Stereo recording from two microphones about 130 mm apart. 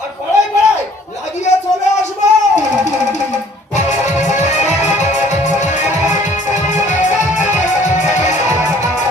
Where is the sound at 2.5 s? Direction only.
65° left (ahead or behind).